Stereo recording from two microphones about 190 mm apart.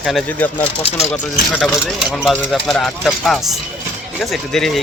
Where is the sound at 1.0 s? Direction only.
35° left (ahead or behind).